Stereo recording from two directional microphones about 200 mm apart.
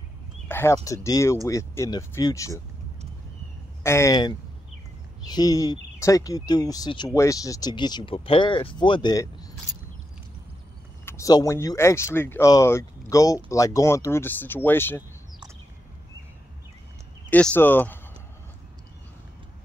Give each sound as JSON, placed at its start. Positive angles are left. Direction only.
{"t": 0.5, "sound": "a sound", "side_deg": 10}
{"t": 0.8, "sound": "speech", "side_deg": 15}
{"t": 3.8, "sound": "speech", "side_deg": 15}
{"t": 11.1, "sound": "speech", "side_deg": 15}
{"t": 17.3, "sound": "speech", "side_deg": 5}